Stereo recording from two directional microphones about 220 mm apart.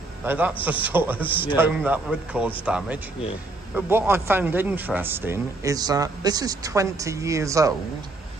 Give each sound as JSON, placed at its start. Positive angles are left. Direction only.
{"t": 0.2, "sound": "speech", "side_deg": -10}
{"t": 1.3, "sound": "a man's voice", "side_deg": 25}
{"t": 1.6, "sound": "speech", "side_deg": -5}